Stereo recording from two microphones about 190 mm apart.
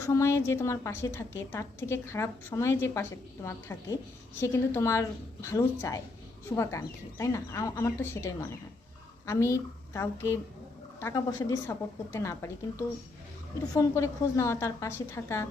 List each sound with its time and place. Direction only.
0.0 s a woman's voice: 15° left (ahead or behind)
13.7 s a woman's voice: 15° left (ahead or behind)